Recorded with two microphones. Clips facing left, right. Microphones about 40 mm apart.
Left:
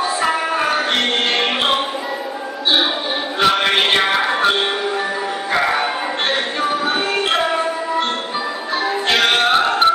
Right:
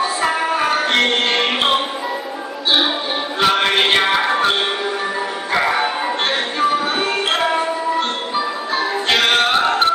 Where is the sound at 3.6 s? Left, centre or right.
Centre.